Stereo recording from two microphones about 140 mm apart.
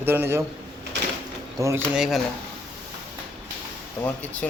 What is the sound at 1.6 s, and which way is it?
Speech, 20° right (ahead or behind).